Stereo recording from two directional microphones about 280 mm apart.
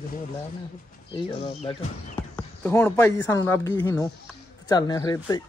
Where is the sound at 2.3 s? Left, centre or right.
Centre.